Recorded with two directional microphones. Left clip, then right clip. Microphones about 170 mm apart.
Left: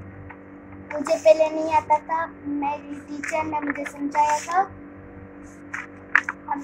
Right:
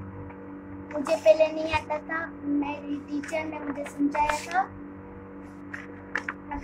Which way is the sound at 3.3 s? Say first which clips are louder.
Left 6 dB; 55° left (ahead or behind).